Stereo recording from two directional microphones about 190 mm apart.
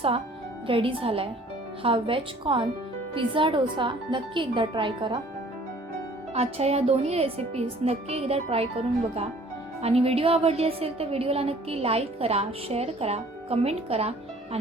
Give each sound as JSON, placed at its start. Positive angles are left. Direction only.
{"t": 0.7, "sound": "speech", "side_deg": -30}
{"t": 6.3, "sound": "a woman's voice", "side_deg": -35}
{"t": 9.8, "sound": "a woman's voice", "side_deg": -30}